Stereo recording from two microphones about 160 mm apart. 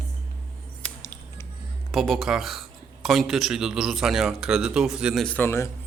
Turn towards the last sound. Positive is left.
turn(degrees=15)  # may be behind; listen again after turning